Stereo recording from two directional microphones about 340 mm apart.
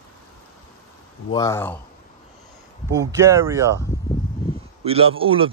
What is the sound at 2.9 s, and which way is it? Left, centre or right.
Speech, centre.